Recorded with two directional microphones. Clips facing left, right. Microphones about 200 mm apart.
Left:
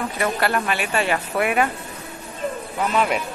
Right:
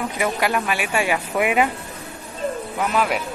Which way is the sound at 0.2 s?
10° right (ahead or behind).